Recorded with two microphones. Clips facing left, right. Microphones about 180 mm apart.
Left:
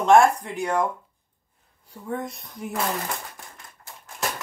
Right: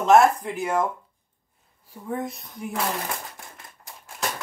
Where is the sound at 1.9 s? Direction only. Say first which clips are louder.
Right 1 dB; centre (ahead or behind).